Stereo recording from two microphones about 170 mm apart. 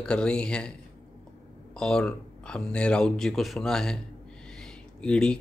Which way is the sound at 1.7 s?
5° left (ahead or behind).